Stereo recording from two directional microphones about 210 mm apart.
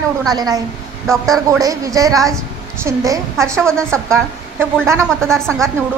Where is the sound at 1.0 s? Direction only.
Centre (ahead or behind).